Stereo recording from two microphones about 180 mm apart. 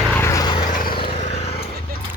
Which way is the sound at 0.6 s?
50° left (ahead or behind).